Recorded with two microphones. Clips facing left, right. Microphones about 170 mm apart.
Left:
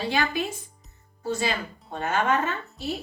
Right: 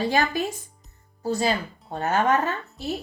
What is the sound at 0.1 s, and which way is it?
Speech, 45° right (ahead or behind).